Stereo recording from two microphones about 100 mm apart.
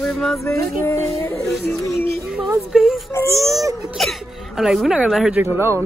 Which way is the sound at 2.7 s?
5° right (ahead or behind).